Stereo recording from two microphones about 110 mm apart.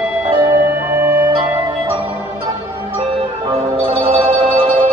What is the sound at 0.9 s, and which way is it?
Music, 20° right (ahead or behind).